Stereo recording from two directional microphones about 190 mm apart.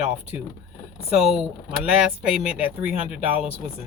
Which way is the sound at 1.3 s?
5° right (ahead or behind).